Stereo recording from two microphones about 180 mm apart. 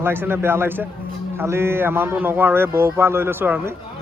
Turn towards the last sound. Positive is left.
turn(degrees=-10)  # may be behind; listen again after turning